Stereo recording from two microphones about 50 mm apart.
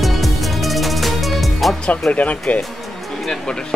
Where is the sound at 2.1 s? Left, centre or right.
Left.